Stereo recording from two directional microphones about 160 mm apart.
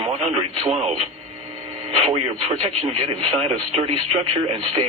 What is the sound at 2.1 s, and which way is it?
Speech, 30° right (ahead or behind).